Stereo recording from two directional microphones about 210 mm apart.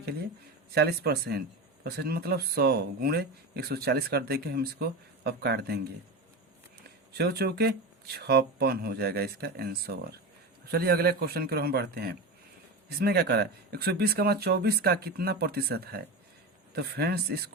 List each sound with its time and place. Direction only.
0.7 s speech: 50° right (ahead or behind)
7.1 s speech: 50° right (ahead or behind)